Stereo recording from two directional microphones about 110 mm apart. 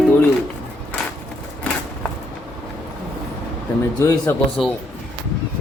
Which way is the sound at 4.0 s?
25° left (ahead or behind).